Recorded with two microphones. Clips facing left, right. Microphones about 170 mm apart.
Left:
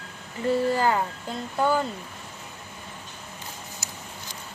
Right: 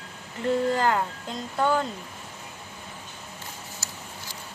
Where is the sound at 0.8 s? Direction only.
5° left (ahead or behind).